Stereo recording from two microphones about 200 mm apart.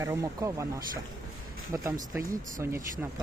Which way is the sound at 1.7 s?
15° right (ahead or behind).